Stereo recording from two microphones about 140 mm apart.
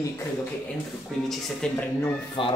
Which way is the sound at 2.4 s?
35° left (ahead or behind).